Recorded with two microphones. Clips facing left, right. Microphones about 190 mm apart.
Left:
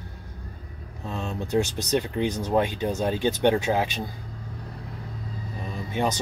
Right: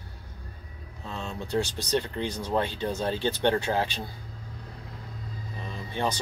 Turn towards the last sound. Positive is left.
turn(degrees=15)  # may be behind; listen again after turning